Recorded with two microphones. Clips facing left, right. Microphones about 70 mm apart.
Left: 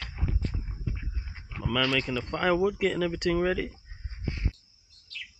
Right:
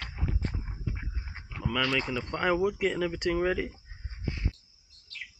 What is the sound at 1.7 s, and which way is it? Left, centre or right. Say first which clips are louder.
Speech: left 2 dB; centre.